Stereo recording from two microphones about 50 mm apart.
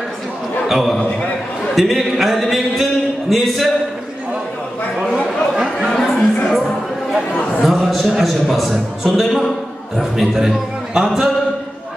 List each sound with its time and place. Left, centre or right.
0.7 s a man's voice: centre
5.1 s a sound: centre
5.9 s music: centre
7.6 s a man's voice: centre